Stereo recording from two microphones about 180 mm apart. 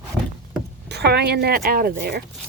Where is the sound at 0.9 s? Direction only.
65° right (ahead or behind).